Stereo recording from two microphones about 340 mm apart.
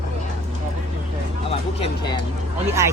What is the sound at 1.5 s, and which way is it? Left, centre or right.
Speech, centre.